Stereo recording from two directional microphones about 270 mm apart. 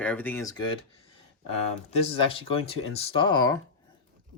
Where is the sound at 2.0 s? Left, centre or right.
Centre.